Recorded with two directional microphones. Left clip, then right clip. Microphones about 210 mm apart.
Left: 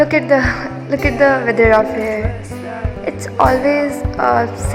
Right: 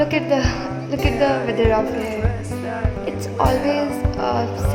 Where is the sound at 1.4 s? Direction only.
20° left (ahead or behind).